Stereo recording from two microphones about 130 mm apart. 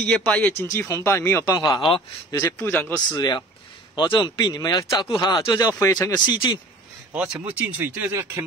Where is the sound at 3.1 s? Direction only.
30° left (ahead or behind).